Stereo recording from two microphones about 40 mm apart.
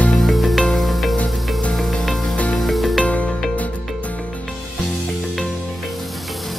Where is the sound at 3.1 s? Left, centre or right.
Left.